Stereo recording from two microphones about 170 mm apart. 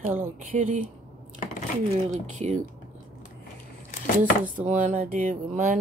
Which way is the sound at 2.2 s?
40° right (ahead or behind).